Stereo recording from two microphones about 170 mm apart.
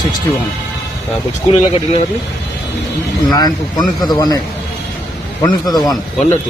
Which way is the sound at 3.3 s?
25° left (ahead or behind).